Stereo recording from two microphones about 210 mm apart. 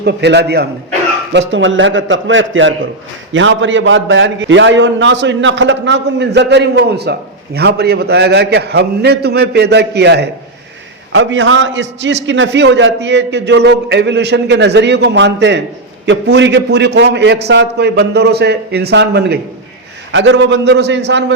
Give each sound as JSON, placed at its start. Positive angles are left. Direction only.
{"t": 0.0, "sound": "a man's voice", "side_deg": -55}
{"t": 11.1, "sound": "a man's voice", "side_deg": -65}